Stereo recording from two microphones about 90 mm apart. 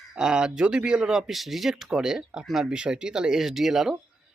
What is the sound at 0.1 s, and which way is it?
Speech, 10° right (ahead or behind).